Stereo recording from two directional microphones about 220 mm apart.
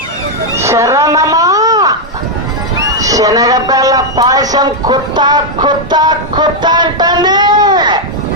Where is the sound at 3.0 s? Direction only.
15° right (ahead or behind).